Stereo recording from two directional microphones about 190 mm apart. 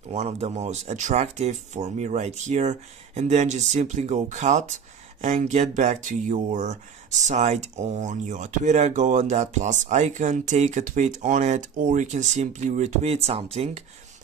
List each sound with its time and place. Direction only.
0.1 s speech: 35° right (ahead or behind)